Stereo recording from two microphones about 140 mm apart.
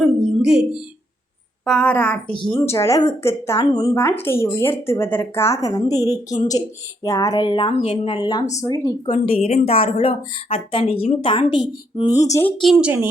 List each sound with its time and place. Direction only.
0.0 s a sound: 5° right (ahead or behind)
1.6 s a woman's voice: 5° left (ahead or behind)
2.6 s speech: 20° left (ahead or behind)
4.2 s speech: 15° left (ahead or behind)
9.0 s a woman's voice: 45° left (ahead or behind)
12.0 s speech: 25° left (ahead or behind)
12.5 s speech: 5° left (ahead or behind)
12.8 s speech: 15° right (ahead or behind)